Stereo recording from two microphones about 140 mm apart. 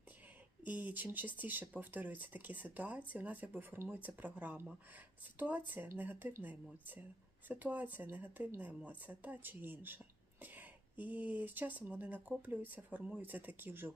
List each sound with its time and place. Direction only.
0.6 s speech: 10° right (ahead or behind)